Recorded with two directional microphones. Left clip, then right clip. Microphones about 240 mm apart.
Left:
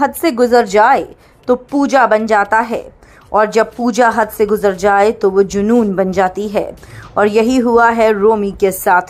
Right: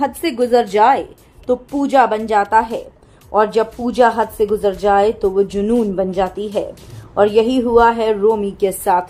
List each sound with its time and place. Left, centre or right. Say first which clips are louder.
0.0 s speech: left 5 dB; centre